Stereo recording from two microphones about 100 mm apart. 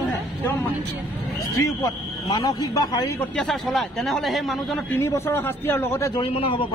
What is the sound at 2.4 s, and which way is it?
Speech, 40° left (ahead or behind).